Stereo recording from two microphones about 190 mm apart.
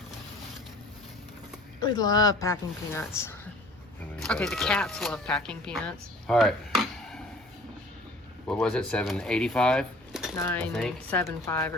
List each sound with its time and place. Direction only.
1.8 s speech: 20° left (ahead or behind)
4.2 s speech: 5° left (ahead or behind)
8.4 s speech: 5° left (ahead or behind)
10.3 s a woman's voice: 10° left (ahead or behind)